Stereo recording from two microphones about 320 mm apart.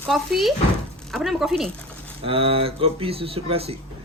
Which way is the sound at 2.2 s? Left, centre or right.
Centre.